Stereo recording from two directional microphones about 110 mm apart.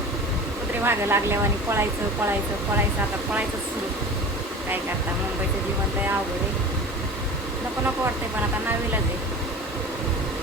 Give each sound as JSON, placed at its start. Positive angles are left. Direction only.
{"t": 0.9, "sound": "speech", "side_deg": -20}